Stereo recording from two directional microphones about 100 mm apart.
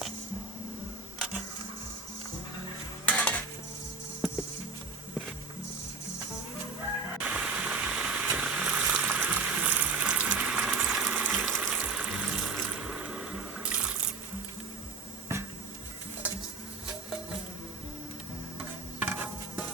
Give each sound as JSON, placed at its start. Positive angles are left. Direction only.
{"t": 3.1, "sound": "dishes", "side_deg": 15}
{"t": 7.2, "sound": "a sound", "side_deg": -10}
{"t": 11.0, "sound": "water", "side_deg": -15}
{"t": 11.6, "sound": "water tap", "side_deg": -15}
{"t": 15.3, "sound": "dishes", "side_deg": -30}
{"t": 18.9, "sound": "insect", "side_deg": -15}